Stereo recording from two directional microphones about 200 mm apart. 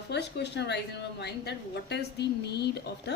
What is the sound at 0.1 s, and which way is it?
A woman's voice, 60° left (ahead or behind).